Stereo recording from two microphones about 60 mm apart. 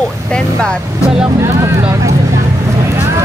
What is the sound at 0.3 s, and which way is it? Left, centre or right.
Speech, centre.